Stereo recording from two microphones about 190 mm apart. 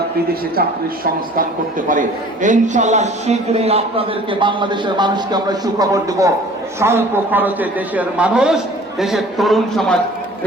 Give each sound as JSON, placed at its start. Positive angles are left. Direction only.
{"t": 1.9, "sound": "a man's voice", "side_deg": -40}